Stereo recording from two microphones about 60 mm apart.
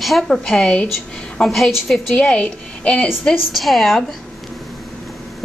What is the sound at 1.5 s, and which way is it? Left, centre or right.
Speech, centre.